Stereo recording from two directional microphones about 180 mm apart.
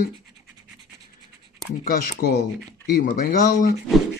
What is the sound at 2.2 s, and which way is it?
Speech, 60° left (ahead or behind).